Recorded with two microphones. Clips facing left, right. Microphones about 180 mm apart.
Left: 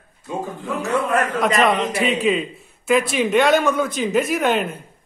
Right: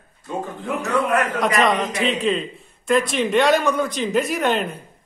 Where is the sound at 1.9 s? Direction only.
5° left (ahead or behind).